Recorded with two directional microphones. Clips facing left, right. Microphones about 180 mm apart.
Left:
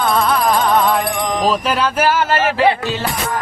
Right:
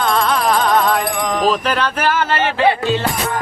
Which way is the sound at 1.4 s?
5° left (ahead or behind).